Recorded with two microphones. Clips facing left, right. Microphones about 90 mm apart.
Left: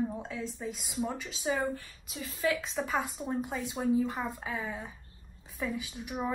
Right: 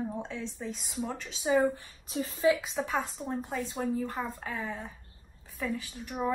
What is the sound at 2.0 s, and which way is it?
Speech, 35° right (ahead or behind).